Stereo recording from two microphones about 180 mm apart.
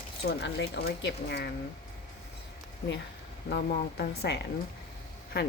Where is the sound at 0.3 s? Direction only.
70° left (ahead or behind).